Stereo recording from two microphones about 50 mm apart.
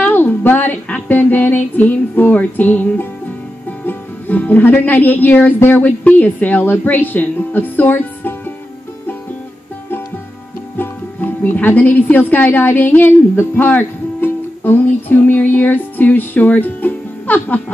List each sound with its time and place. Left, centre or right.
0.0 s female singing: left
3.8 s music: left
6.7 s speech: left
10.8 s speech: left